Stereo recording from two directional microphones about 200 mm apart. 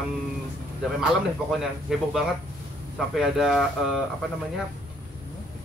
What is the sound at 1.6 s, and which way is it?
Speech, centre (ahead or behind).